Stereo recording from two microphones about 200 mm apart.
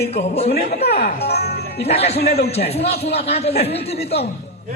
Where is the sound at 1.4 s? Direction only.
50° left (ahead or behind).